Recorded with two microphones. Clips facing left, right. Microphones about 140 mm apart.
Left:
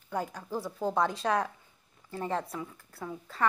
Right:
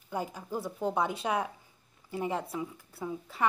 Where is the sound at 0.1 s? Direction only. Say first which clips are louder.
Left 1 dB; 10° right (ahead or behind).